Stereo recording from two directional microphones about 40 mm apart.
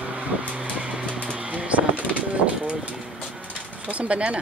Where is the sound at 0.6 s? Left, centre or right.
Right.